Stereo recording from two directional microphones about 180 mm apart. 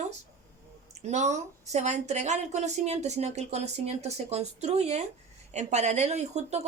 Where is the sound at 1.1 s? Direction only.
40° right (ahead or behind).